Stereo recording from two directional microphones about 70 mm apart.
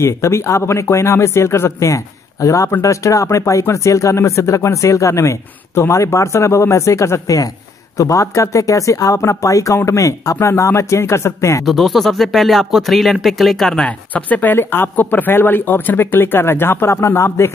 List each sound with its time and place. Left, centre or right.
0.0 s speech: left
11.6 s speech: centre
13.8 s speech: left